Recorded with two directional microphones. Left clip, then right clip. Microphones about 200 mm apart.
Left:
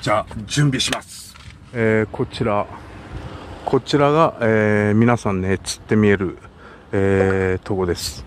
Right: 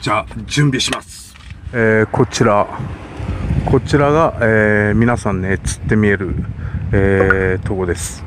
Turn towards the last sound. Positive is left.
turn(degrees=10)  # may be behind; listen again after turning